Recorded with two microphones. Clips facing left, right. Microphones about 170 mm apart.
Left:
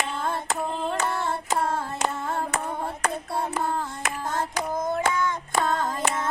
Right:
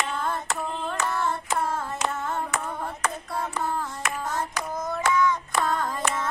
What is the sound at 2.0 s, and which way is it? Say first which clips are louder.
Hands: left 1 dB; 30° left (ahead or behind).